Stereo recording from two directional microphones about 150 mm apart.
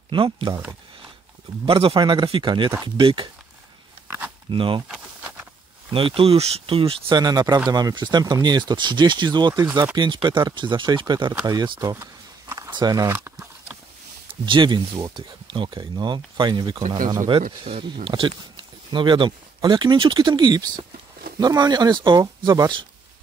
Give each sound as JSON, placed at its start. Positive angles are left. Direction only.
{"t": 0.1, "sound": "speech", "side_deg": -35}
{"t": 1.7, "sound": "speech", "side_deg": -40}
{"t": 4.5, "sound": "speech", "side_deg": -35}
{"t": 4.8, "sound": "a sound", "side_deg": -5}
{"t": 5.9, "sound": "speech", "side_deg": -35}
{"t": 11.4, "sound": "a sound", "side_deg": -30}
{"t": 12.7, "sound": "speech", "side_deg": -25}
{"t": 13.1, "sound": "a sound", "side_deg": -10}
{"t": 14.4, "sound": "speech", "side_deg": -30}